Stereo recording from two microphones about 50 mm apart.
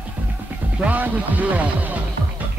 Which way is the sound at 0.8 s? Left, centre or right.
Right.